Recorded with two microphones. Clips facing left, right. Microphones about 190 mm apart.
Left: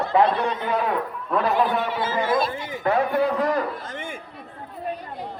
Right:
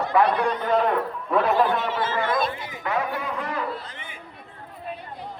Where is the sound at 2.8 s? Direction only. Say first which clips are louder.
Left 7 dB; 35° left (ahead or behind).